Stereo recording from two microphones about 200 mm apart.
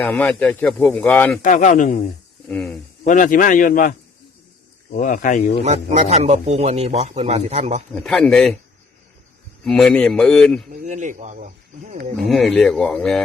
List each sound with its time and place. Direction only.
0.0 s speech: 10° left (ahead or behind)
1.4 s a man's voice: 40° left (ahead or behind)
2.5 s speech: 5° left (ahead or behind)
3.1 s a man's voice: 40° left (ahead or behind)
4.9 s a man's voice: 40° left (ahead or behind)
5.6 s a man's voice: 35° right (ahead or behind)
7.9 s speech: centre (ahead or behind)
9.6 s speech: 5° left (ahead or behind)
10.7 s a man's voice: 40° right (ahead or behind)
12.2 s speech: centre (ahead or behind)